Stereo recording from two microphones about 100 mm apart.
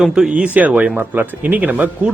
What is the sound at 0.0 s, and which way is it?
Speech, 5° right (ahead or behind).